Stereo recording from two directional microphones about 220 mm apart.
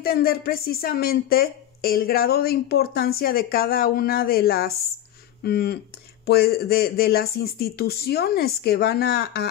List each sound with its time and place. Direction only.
0.0 s speech: 45° left (ahead or behind)